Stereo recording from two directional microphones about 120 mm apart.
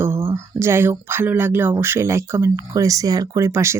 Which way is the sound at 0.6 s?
20° right (ahead or behind).